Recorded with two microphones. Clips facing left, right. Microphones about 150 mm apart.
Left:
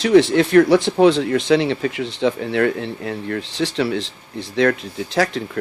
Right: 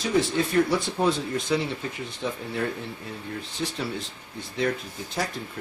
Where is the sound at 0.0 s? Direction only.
85° left.